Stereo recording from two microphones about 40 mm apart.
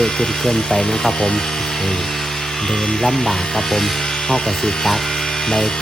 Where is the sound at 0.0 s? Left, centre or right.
Centre.